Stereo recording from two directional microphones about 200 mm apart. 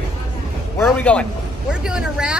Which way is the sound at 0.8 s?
5° left (ahead or behind).